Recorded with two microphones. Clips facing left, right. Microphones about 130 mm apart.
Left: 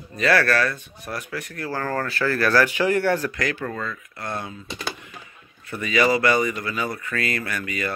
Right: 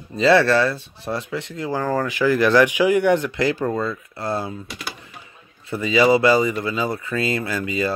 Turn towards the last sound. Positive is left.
turn(degrees=-25)  # may be behind; listen again after turning